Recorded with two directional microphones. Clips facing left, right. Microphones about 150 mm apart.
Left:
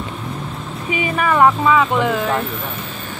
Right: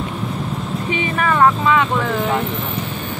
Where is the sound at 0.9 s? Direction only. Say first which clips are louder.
Left 2 dB; 10° left (ahead or behind).